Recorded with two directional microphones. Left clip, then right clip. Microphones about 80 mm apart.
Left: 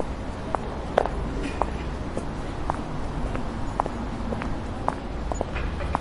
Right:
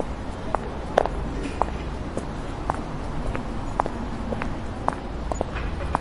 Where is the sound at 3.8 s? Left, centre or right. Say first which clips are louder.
Right 2 dB; right.